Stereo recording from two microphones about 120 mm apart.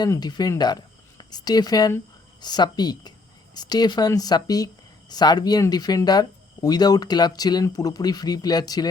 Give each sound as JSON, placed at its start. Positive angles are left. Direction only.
{"t": 0.2, "sound": "speech", "side_deg": 35}